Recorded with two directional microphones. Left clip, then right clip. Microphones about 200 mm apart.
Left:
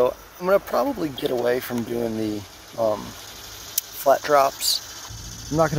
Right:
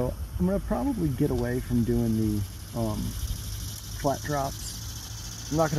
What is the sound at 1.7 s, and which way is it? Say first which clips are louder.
Speech: left 1 dB; 50° left (ahead or behind).